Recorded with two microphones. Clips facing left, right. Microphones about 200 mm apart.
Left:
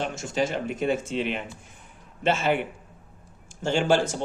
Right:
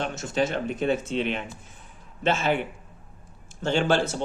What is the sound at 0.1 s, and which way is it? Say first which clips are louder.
Speech: right 1 dB; 10° left (ahead or behind).